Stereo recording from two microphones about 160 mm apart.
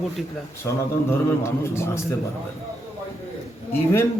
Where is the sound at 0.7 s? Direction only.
20° left (ahead or behind).